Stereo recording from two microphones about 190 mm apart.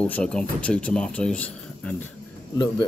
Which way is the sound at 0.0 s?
5° left (ahead or behind).